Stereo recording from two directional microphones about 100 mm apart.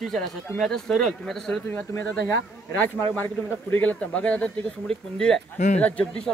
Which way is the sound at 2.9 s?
20° left (ahead or behind).